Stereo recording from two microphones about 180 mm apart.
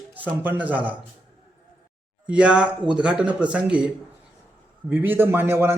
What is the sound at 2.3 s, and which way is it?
Speech, 5° right (ahead or behind).